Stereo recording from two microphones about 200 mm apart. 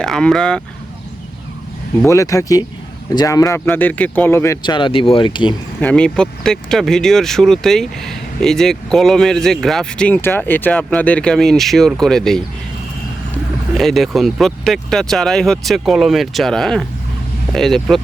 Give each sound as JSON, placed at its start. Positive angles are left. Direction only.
{"t": 0.0, "sound": "speech", "side_deg": 0}
{"t": 2.0, "sound": "speech", "side_deg": 15}
{"t": 5.8, "sound": "speech", "side_deg": 5}
{"t": 13.7, "sound": "speech", "side_deg": 0}